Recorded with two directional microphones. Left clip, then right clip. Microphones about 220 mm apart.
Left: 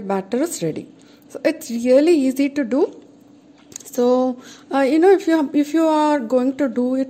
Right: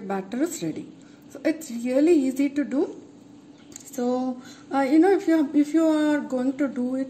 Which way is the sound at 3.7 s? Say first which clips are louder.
Left 10 dB; 40° left (ahead or behind).